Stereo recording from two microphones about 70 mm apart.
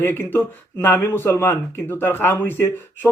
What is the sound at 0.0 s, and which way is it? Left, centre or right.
A man's voice, left.